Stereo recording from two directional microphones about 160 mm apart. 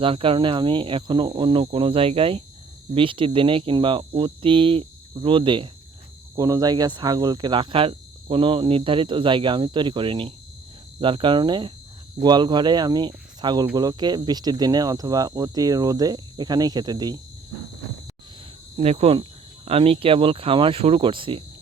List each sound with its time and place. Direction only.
0.0 s speech: 35° right (ahead or behind)
18.8 s speech: 40° right (ahead or behind)